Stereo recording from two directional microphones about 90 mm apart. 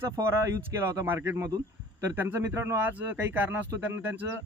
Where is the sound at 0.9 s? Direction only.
25° right (ahead or behind).